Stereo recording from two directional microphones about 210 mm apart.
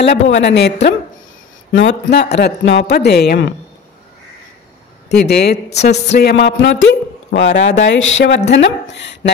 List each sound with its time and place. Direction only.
0.0 s speech: 55° left (ahead or behind)
5.1 s speech: 50° left (ahead or behind)